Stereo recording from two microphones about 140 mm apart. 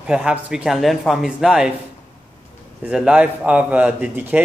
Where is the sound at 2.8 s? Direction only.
5° right (ahead or behind).